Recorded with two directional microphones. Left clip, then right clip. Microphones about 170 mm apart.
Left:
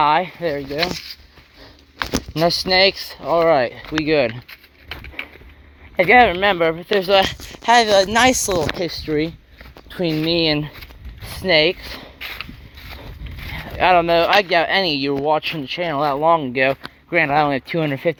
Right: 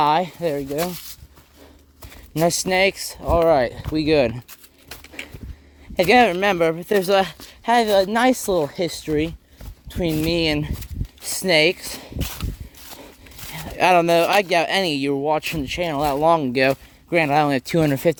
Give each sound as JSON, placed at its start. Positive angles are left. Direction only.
{"t": 0.0, "sound": "a sound", "side_deg": -90}
{"t": 0.4, "sound": "speech", "side_deg": -50}
{"t": 2.3, "sound": "speech", "side_deg": -30}
{"t": 3.8, "sound": "speech", "side_deg": -50}
{"t": 6.0, "sound": "speech", "side_deg": -60}
{"t": 7.6, "sound": "speech", "side_deg": -40}
{"t": 8.4, "sound": "speech", "side_deg": -40}
{"t": 9.0, "sound": "speech", "side_deg": -20}
{"t": 11.2, "sound": "speech", "side_deg": -55}
{"t": 11.8, "sound": "speech", "side_deg": -55}
{"t": 13.5, "sound": "speech", "side_deg": -65}
{"t": 14.3, "sound": "speech", "side_deg": -45}
{"t": 15.4, "sound": "speech", "side_deg": -45}
{"t": 16.2, "sound": "speech", "side_deg": -75}